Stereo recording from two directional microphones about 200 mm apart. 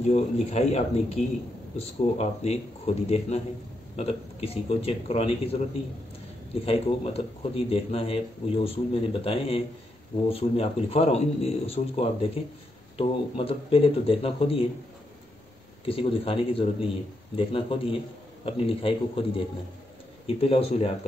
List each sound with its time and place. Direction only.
0.1 s a man's voice: 35° left (ahead or behind)
15.8 s a man's voice: 25° left (ahead or behind)